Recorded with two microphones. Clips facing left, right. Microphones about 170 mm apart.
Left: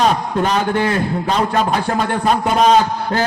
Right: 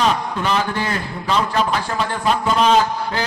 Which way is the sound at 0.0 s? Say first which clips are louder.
Left 3 dB; 45° left (ahead or behind).